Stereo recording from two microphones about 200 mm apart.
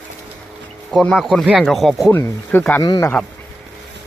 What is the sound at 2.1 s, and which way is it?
Speech, 10° left (ahead or behind).